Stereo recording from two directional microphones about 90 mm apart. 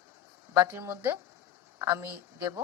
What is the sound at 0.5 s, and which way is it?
Speech, 25° right (ahead or behind).